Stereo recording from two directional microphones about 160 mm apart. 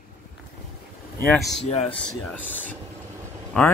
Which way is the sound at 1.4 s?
Centre (ahead or behind).